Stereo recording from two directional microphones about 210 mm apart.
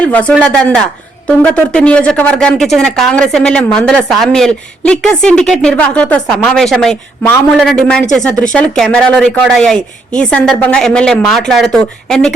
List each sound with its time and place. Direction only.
0.0 s speech: 5° left (ahead or behind)